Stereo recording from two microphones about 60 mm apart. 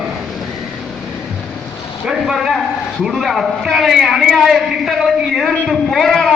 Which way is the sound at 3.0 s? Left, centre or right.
Centre.